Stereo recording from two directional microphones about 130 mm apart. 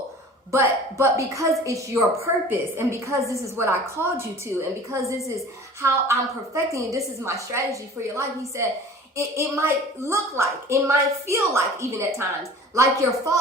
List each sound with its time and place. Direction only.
0.5 s a woman's voice: 25° right (ahead or behind)